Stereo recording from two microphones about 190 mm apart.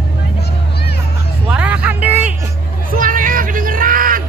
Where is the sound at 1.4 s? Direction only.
5° right (ahead or behind).